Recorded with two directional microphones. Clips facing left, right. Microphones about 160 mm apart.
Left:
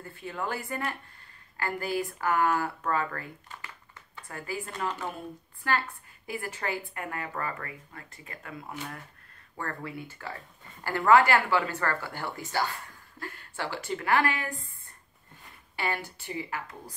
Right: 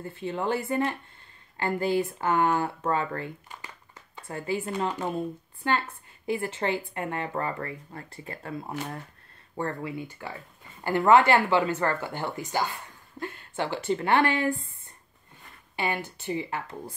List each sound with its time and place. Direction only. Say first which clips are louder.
0.0 s speech: right 5 dB; 25° right (ahead or behind)
3.4 s a sound: right 1 dB; 20° right (ahead or behind)
5.6 s speech: right 2 dB; 20° right (ahead or behind)
9.6 s speech: right 5 dB; 20° right (ahead or behind)
15.7 s speech: right 3 dB; 20° right (ahead or behind)